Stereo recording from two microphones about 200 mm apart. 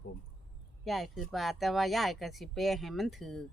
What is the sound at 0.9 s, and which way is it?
Speech, centre (ahead or behind).